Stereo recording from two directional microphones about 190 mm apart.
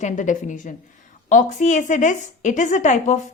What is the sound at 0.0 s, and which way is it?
A woman's voice, 40° left (ahead or behind).